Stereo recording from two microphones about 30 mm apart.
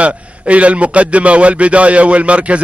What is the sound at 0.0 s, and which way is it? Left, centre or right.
A man's voice, right.